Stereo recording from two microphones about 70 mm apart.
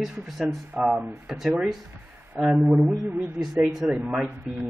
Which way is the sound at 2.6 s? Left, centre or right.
Centre.